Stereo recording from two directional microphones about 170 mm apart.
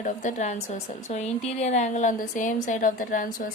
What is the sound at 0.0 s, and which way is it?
A woman's voice, 45° left (ahead or behind).